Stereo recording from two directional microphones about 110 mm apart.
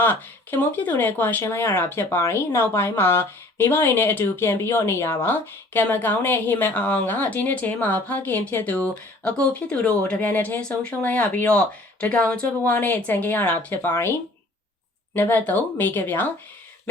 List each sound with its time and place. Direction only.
0.0 s speech: 20° left (ahead or behind)
15.1 s speech: 20° left (ahead or behind)